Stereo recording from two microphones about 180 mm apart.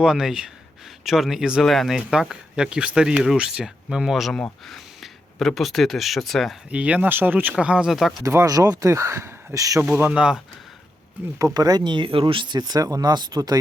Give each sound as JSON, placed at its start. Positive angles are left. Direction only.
{"t": 0.0, "sound": "speech", "side_deg": -5}
{"t": 8.2, "sound": "speech", "side_deg": -15}
{"t": 11.3, "sound": "speech", "side_deg": -20}